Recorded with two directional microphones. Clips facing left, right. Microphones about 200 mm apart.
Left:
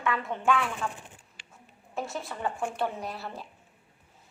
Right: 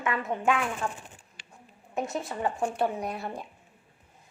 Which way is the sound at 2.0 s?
20° right (ahead or behind).